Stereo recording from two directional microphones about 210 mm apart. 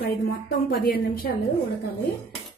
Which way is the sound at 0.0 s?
45° left (ahead or behind).